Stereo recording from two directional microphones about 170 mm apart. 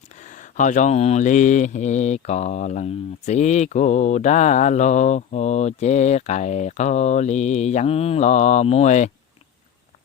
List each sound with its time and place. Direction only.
0.2 s mantra: 45° left (ahead or behind)